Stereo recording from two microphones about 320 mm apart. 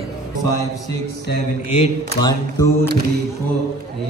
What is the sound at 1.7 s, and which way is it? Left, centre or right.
Speech, centre.